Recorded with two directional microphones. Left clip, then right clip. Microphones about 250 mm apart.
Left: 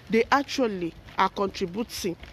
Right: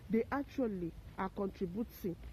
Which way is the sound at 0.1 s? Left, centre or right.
Centre.